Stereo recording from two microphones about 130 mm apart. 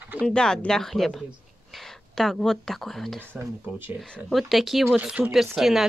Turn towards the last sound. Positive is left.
turn(degrees=0)  # may be behind; listen again after turning